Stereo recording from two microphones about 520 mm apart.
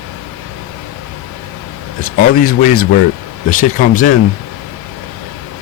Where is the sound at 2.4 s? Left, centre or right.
Centre.